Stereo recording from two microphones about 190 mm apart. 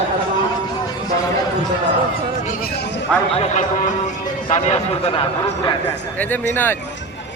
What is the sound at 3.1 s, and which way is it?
Speech, 5° left (ahead or behind).